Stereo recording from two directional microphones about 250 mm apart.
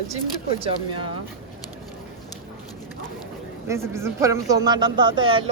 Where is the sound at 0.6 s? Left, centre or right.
Centre.